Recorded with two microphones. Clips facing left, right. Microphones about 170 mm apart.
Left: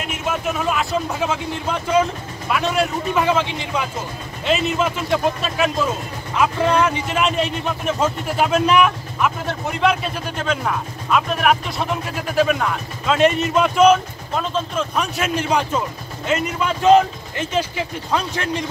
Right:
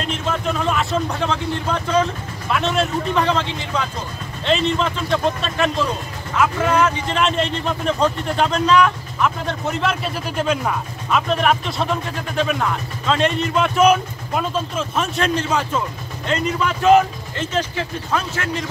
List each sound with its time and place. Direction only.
0.0 s speech: 10° left (ahead or behind)
6.3 s speech: 15° left (ahead or behind)
9.8 s speech: 5° right (ahead or behind)
13.7 s speech: 10° right (ahead or behind); by 15.8 s 10° left (ahead or behind)
16.8 s speech: 15° left (ahead or behind)